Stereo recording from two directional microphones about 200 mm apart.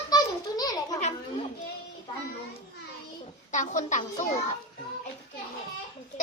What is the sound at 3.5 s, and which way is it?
Speech, 40° left (ahead or behind).